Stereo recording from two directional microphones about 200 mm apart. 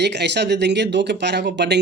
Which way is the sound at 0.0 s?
60° right (ahead or behind).